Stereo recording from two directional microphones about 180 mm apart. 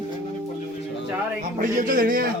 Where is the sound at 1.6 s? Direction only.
50° right (ahead or behind).